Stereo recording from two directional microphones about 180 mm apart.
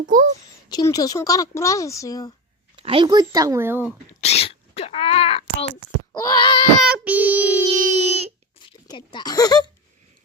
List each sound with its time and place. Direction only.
0.0 s speech: 45° right (ahead or behind)
0.7 s speech: 20° left (ahead or behind)
2.7 s speech: 30° right (ahead or behind); by 3.8 s 10° right (ahead or behind)
4.2 s a sound: 35° left (ahead or behind)
6.1 s speech: 25° left (ahead or behind)
6.8 s child singing: 5° right (ahead or behind)
7.8 s speech: 40° right (ahead or behind)
8.6 s speech: 25° left (ahead or behind)